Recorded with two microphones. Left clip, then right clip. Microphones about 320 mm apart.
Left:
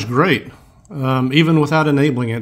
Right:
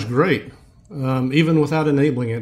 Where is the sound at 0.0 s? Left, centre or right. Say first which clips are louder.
Left 3 dB; centre.